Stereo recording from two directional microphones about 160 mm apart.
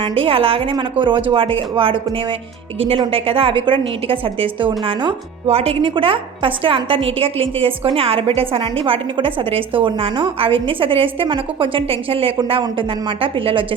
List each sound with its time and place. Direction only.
0.0 s a woman's voice: 35° right (ahead or behind)